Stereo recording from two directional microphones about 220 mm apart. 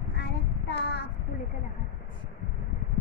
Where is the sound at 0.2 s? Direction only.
50° left (ahead or behind).